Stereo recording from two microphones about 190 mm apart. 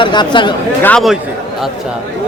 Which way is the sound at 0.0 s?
25° left (ahead or behind).